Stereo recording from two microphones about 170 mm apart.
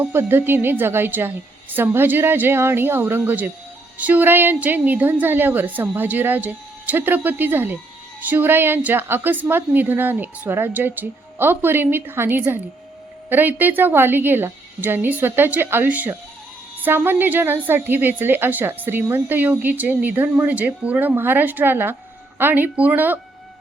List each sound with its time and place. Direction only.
0.0 s a woman's voice: 10° right (ahead or behind)